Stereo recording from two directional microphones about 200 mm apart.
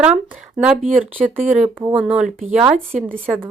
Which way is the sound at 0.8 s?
40° right (ahead or behind).